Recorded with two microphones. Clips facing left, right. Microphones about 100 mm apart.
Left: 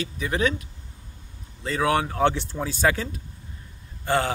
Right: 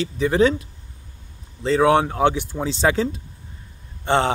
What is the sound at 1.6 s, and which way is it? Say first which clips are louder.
Speech: right 7 dB; 25° right (ahead or behind).